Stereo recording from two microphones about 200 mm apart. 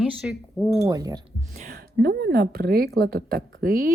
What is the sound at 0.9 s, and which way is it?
Speech, 20° right (ahead or behind).